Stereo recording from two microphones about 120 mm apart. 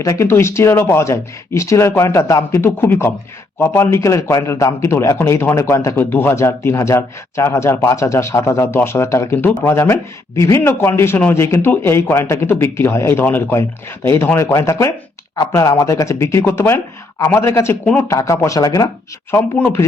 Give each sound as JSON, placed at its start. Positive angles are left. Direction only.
{"t": 0.0, "sound": "a man's voice", "side_deg": 25}
{"t": 19.3, "sound": "speech", "side_deg": 15}